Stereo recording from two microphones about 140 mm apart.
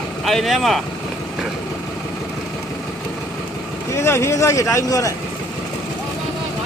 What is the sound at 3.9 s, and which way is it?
Speech, 20° left (ahead or behind).